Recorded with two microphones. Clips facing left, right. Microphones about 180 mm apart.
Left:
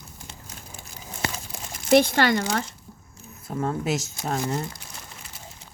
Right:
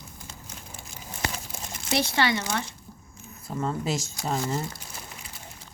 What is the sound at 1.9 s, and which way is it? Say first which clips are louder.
Speech: left 7 dB; 50° left (ahead or behind).